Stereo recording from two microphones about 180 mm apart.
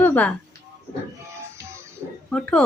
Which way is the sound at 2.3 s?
5° left (ahead or behind).